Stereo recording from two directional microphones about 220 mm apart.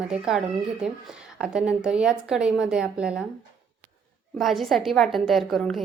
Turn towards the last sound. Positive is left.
turn(degrees=0)  # may be behind; listen again after turning